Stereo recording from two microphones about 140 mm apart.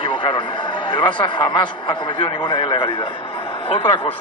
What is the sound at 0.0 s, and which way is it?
A man's voice, 35° left (ahead or behind).